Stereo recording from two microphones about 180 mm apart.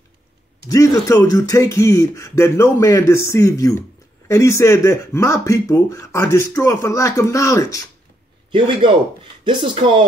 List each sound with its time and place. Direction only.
0.7 s speech: 20° left (ahead or behind)
8.5 s speech: 25° right (ahead or behind)